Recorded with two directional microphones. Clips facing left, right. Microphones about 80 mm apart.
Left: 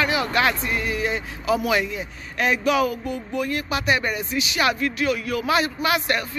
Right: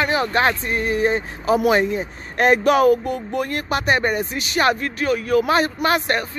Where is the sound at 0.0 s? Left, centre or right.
Right.